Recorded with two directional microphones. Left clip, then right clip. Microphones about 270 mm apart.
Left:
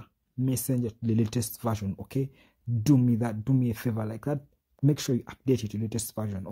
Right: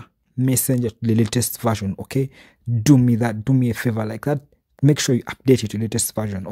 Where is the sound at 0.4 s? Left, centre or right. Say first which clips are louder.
Right 9 dB; right.